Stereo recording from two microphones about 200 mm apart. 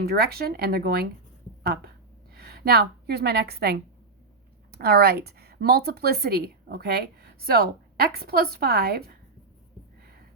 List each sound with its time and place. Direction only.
0.0 s a woman's voice: 50° right (ahead or behind)